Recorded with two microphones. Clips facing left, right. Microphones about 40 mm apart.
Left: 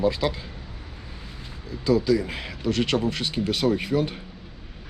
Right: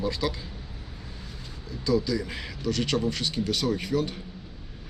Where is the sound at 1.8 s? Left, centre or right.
Left.